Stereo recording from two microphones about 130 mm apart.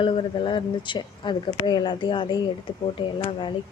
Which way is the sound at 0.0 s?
40° left (ahead or behind).